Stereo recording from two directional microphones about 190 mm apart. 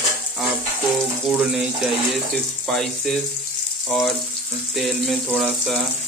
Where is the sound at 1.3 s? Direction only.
5° right (ahead or behind).